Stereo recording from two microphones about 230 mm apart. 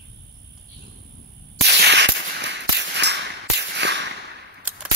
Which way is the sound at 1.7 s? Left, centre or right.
Right.